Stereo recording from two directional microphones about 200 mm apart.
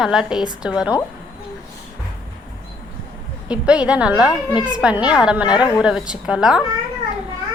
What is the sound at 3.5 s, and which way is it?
A woman's voice, 5° right (ahead or behind).